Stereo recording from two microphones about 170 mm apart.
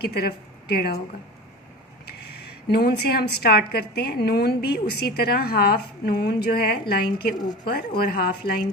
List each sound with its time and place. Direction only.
0.0 s a woman's voice: 70° left (ahead or behind)
2.6 s a woman's voice: 70° left (ahead or behind)
7.3 s speech: 25° left (ahead or behind)
7.7 s speech: 60° left (ahead or behind)